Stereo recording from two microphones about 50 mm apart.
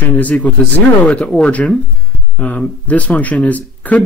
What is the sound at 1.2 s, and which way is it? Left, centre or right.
Speech, centre.